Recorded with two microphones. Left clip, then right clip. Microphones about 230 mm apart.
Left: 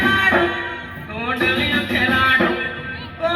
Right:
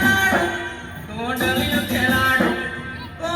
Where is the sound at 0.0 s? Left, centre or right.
Right.